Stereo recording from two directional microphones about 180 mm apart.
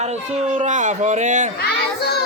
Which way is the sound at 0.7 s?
45° right (ahead or behind).